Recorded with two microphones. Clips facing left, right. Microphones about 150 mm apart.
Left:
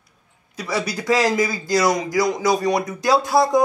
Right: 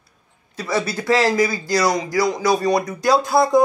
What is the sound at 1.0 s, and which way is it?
A man's voice, 15° left (ahead or behind).